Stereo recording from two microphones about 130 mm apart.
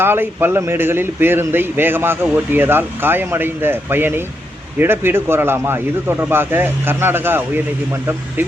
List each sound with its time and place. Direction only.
0.0 s speech: 15° right (ahead or behind)